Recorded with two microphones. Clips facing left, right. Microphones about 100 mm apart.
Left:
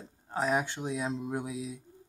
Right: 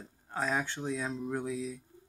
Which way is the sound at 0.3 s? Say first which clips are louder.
Left 3 dB; 15° left (ahead or behind).